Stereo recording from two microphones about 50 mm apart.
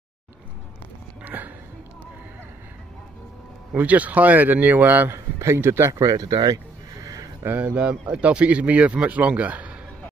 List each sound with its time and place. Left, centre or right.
1.2 s a sound: right
3.7 s speech: right
5.1 s a man's voice: right
7.5 s speech: right